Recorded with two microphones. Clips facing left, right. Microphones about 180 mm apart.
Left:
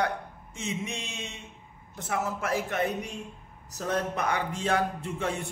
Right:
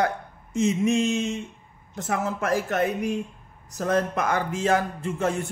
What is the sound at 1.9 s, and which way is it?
Speech, 45° right (ahead or behind).